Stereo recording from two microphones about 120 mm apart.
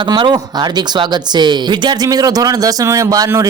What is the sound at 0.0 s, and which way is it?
A man's voice, 40° right (ahead or behind).